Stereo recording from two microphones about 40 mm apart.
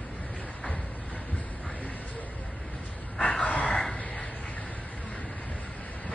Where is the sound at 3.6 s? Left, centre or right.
Centre.